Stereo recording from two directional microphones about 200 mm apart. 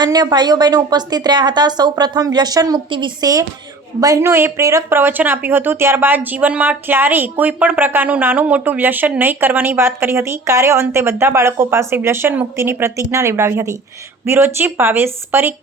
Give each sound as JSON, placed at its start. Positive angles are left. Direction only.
{"t": 0.0, "sound": "a woman's voice", "side_deg": -20}